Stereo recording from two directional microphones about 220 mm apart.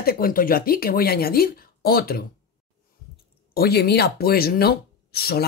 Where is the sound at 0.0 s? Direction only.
40° left (ahead or behind).